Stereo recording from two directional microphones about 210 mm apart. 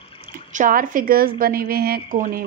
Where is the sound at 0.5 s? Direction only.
40° right (ahead or behind).